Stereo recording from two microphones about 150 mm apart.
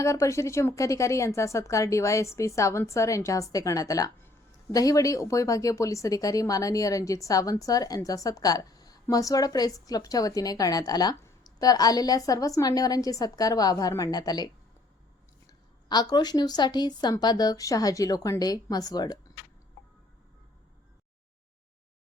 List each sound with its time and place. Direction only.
0.0 s a woman's voice: 20° left (ahead or behind)
15.9 s a woman's voice: 30° left (ahead or behind)